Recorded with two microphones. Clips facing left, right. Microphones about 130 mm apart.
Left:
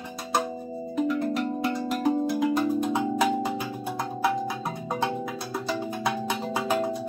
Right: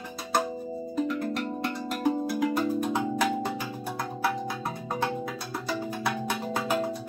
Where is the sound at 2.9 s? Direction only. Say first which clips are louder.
Left 3 dB; 15° left (ahead or behind).